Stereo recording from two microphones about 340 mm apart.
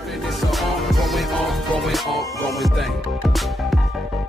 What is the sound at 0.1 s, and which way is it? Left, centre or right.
Music, centre.